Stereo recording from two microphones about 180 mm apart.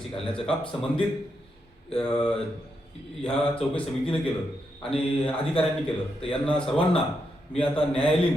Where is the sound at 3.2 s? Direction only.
5° left (ahead or behind).